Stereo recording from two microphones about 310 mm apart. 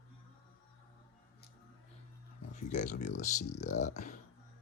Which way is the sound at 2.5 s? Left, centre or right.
Left.